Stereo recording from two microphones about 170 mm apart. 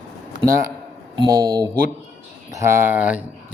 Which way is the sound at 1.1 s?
25° right (ahead or behind).